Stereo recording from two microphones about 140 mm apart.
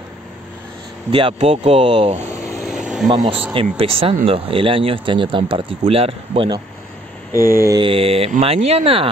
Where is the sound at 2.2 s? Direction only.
20° left (ahead or behind).